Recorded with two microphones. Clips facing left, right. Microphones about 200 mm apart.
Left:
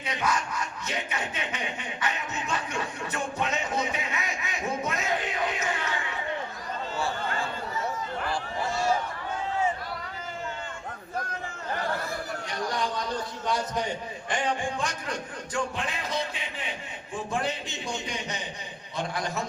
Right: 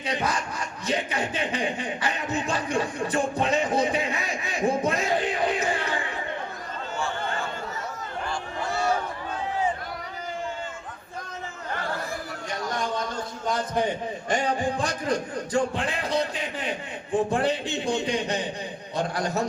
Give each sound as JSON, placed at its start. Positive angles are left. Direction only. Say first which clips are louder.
{"t": 0.0, "sound": "a sound", "louder": "right 2 dB", "side_deg": -30}
{"t": 14.3, "sound": "music", "louder": "right 4 dB", "side_deg": -40}
{"t": 17.1, "sound": "a man's voice", "louder": "right 7 dB", "side_deg": -35}
{"t": 19.1, "sound": "a man's voice", "louder": "right 5 dB", "side_deg": -40}